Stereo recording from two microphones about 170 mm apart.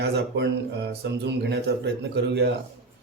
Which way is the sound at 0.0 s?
75° right (ahead or behind).